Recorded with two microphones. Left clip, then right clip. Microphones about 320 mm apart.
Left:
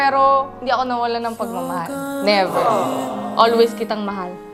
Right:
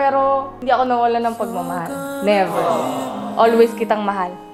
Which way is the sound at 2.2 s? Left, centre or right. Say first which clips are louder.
Even; left.